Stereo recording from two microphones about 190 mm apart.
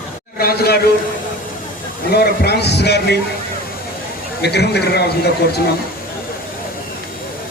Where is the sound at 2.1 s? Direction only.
55° left (ahead or behind).